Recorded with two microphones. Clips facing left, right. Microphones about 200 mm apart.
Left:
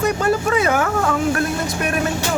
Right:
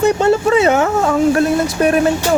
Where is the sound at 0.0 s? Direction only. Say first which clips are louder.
Right 6 dB; 25° right (ahead or behind).